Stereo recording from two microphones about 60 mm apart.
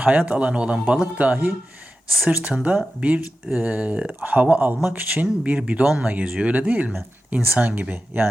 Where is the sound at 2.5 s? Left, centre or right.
Centre.